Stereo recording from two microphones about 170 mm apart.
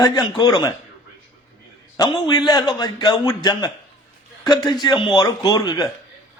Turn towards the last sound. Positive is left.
turn(degrees=25)  # may be behind; listen again after turning